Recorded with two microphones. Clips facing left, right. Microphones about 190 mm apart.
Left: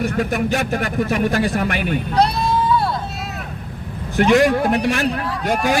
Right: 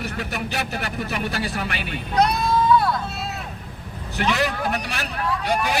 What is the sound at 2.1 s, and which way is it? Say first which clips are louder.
Speech: left 1 dB; 30° left (ahead or behind).